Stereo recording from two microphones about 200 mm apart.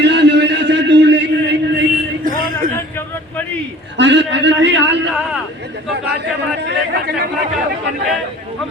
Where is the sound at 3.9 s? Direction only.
65° right (ahead or behind).